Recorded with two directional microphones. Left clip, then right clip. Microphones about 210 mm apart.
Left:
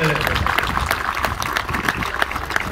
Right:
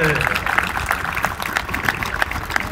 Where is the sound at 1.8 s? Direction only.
30° right (ahead or behind).